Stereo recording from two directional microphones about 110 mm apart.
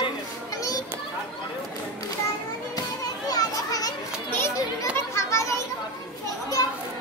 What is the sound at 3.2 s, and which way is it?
Children playing, 35° left (ahead or behind).